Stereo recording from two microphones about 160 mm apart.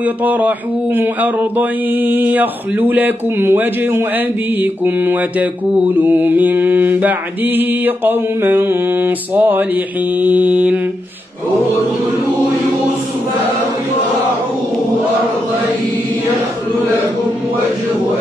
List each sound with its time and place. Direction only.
0.0 s mantra: 10° right (ahead or behind)